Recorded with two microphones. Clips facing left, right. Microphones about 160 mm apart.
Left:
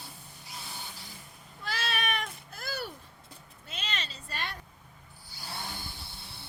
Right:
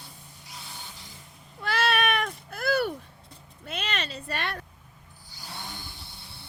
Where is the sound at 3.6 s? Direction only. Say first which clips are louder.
Right 7 dB; 60° right (ahead or behind).